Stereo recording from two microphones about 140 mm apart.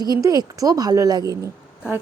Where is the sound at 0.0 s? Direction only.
25° right (ahead or behind).